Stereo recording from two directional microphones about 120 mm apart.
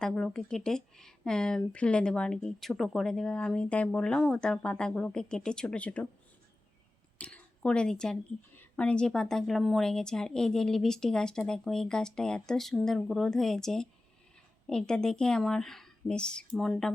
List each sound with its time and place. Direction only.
0.0 s speech: 5° left (ahead or behind)
7.2 s a woman's voice: 10° left (ahead or behind)